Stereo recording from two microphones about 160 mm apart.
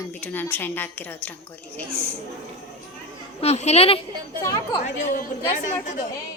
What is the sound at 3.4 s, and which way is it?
Speech, 40° left (ahead or behind).